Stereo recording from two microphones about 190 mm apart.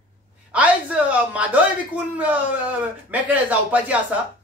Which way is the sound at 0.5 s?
5° right (ahead or behind).